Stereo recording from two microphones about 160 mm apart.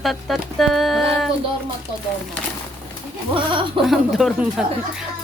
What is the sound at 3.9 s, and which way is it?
Speech, centre (ahead or behind).